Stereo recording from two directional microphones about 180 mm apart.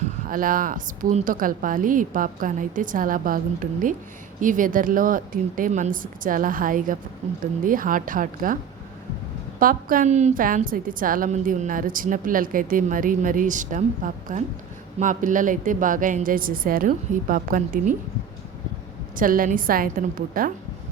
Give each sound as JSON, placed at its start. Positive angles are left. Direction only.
{"t": 0.3, "sound": "a woman's voice", "side_deg": -50}
{"t": 9.6, "sound": "a woman's voice", "side_deg": -50}
{"t": 19.1, "sound": "a woman's voice", "side_deg": -50}